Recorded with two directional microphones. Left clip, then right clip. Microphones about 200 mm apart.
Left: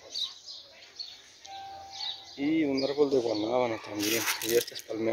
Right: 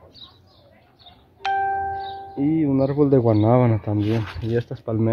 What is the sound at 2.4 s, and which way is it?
Speech, 10° right (ahead or behind).